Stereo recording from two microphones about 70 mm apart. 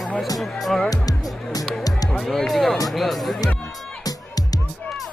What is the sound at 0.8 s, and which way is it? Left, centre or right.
Music, left.